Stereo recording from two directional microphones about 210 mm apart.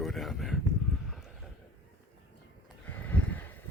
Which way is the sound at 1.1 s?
Centre (ahead or behind).